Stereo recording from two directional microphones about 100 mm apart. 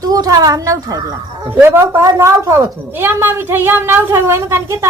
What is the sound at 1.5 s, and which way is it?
A woman's voice, 25° right (ahead or behind).